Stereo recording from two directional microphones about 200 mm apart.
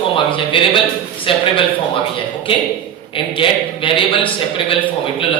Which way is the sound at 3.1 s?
25° left (ahead or behind).